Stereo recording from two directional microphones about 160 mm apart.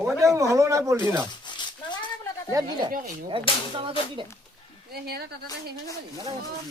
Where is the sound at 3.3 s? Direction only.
35° right (ahead or behind).